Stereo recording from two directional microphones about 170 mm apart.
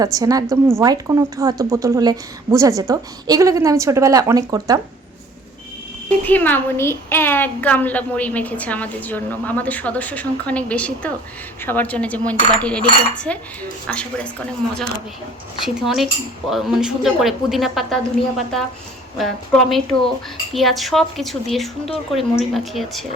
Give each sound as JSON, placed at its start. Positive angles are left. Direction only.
{"t": 0.0, "sound": "a woman's voice", "side_deg": -20}
{"t": 6.1, "sound": "a woman's voice", "side_deg": 10}
{"t": 20.5, "sound": "a woman's voice", "side_deg": 0}